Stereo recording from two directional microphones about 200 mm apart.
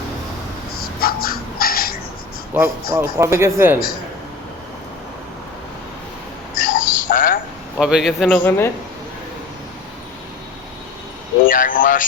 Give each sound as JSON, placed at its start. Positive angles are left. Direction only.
{"t": 1.0, "sound": "a sound", "side_deg": 50}
{"t": 2.5, "sound": "speech", "side_deg": -10}
{"t": 6.6, "sound": "a sound", "side_deg": 40}
{"t": 7.8, "sound": "a man's voice", "side_deg": -5}
{"t": 8.4, "sound": "a man's voice", "side_deg": 10}
{"t": 11.4, "sound": "a man's voice", "side_deg": 40}